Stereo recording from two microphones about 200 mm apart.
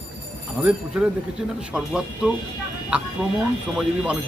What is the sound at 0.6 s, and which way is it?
A man's voice, 10° right (ahead or behind).